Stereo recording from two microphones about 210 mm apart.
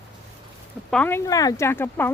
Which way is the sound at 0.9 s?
5° left (ahead or behind).